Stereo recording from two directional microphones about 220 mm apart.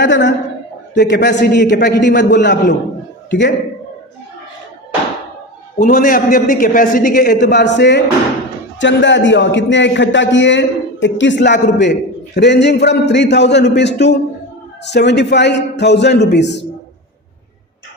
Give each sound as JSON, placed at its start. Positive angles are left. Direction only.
{"t": 0.0, "sound": "a man's voice", "side_deg": 55}
{"t": 5.8, "sound": "a man's voice", "side_deg": 40}